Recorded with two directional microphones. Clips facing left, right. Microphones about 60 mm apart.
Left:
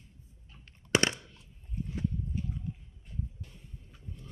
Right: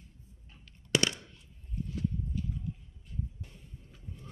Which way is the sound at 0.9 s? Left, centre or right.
Left.